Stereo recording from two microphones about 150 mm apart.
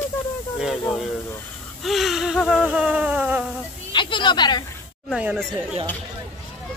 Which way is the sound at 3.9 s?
35° left (ahead or behind).